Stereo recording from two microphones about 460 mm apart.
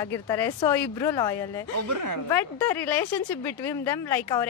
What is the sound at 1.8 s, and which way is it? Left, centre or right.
Speech, right.